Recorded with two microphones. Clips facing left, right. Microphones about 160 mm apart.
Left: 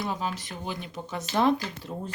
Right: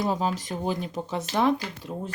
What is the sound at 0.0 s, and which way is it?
Speech, 35° right (ahead or behind).